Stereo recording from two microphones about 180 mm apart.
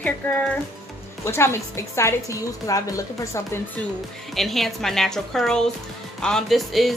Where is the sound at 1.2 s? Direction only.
15° left (ahead or behind).